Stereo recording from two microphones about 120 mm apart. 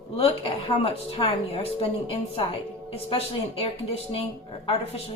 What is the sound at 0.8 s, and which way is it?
A woman's voice, 55° left (ahead or behind).